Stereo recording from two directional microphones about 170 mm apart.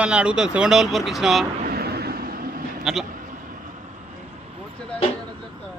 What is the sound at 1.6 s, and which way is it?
Vehicle, 65° right (ahead or behind).